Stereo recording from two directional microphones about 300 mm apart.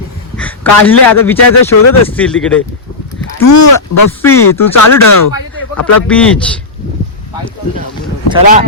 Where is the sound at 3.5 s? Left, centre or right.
Left.